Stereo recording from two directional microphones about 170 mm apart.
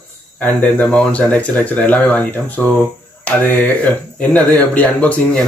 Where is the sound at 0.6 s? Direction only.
10° left (ahead or behind).